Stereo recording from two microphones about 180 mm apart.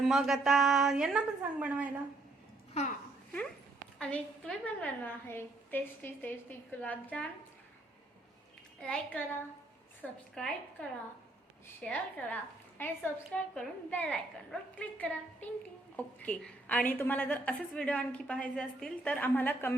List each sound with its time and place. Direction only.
0.0 s a woman's voice: centre (ahead or behind)
3.9 s a woman's voice: 5° left (ahead or behind)
8.8 s a woman's voice: 5° left (ahead or behind)